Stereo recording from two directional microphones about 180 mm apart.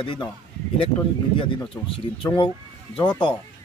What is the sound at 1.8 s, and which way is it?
Speech, 30° left (ahead or behind).